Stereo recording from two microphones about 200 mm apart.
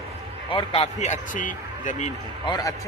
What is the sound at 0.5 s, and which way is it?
Speech, 30° left (ahead or behind).